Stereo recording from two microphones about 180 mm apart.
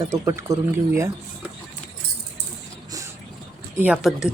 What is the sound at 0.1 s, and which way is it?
Speech, 15° right (ahead or behind).